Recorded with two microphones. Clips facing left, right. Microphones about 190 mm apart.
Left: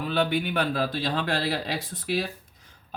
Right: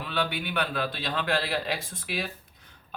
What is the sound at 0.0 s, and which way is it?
Speech, 40° left (ahead or behind).